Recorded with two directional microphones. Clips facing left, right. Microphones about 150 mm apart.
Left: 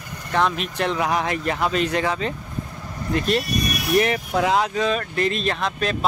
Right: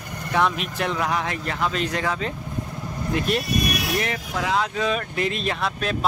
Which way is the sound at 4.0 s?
25° left (ahead or behind).